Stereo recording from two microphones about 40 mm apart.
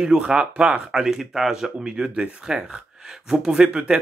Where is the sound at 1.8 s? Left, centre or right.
Right.